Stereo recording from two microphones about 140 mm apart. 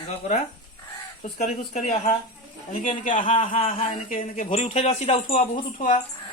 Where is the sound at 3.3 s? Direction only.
40° left (ahead or behind).